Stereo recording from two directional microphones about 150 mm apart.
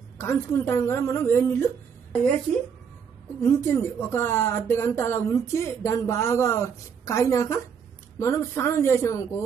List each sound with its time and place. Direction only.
0.2 s speech: 15° left (ahead or behind)
3.3 s a woman's voice: 15° left (ahead or behind)